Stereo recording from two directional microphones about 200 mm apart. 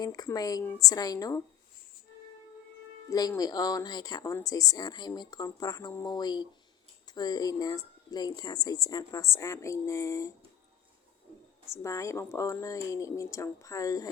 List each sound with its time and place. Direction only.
0.0 s speech: 20° left (ahead or behind)
3.1 s speech: 20° left (ahead or behind)
11.6 s speech: 15° left (ahead or behind)